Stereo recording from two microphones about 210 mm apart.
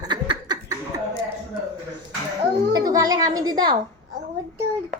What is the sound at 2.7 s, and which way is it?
A woman's voice, 15° right (ahead or behind).